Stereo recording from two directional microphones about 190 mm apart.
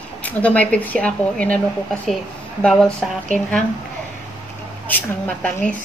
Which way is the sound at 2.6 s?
5° left (ahead or behind).